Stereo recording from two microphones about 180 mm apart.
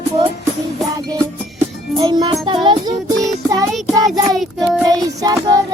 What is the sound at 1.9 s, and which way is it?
Music, 25° right (ahead or behind).